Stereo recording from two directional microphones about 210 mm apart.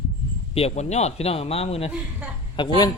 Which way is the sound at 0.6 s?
30° left (ahead or behind).